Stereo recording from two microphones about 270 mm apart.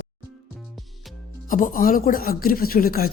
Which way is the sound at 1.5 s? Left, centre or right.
Left.